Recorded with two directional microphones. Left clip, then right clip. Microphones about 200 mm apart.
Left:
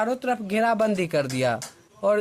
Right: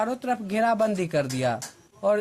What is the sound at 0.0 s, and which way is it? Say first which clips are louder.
Speech: left 2 dB; 25° left (ahead or behind).